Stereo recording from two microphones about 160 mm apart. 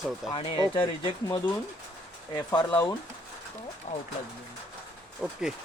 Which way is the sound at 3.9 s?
50° left (ahead or behind).